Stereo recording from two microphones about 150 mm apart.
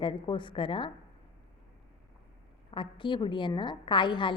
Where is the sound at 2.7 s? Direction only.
35° left (ahead or behind).